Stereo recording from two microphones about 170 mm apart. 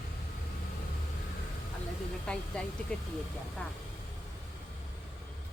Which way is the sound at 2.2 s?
5° left (ahead or behind).